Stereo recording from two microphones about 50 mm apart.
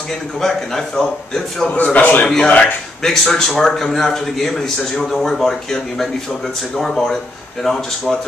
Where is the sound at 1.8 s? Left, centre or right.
Left.